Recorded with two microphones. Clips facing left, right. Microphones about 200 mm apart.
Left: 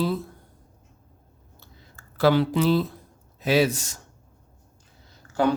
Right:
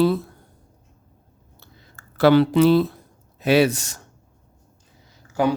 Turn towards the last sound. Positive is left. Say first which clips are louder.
# right 1 dB
turn(degrees=-10)  # may be behind; listen again after turning